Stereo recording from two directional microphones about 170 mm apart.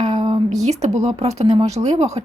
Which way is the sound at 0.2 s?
35° right (ahead or behind).